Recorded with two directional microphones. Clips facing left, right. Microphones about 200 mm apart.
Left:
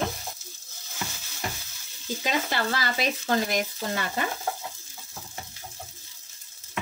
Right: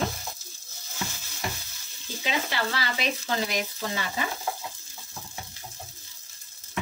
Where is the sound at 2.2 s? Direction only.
45° left (ahead or behind).